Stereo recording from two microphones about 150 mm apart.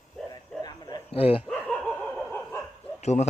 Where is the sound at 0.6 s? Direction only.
25° left (ahead or behind).